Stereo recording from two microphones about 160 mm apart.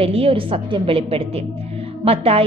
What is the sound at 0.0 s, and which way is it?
A woman's voice, 35° right (ahead or behind).